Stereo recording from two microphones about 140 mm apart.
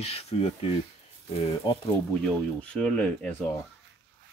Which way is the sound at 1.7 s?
30° left (ahead or behind).